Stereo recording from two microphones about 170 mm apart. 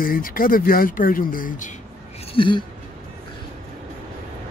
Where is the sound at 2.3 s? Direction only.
30° left (ahead or behind).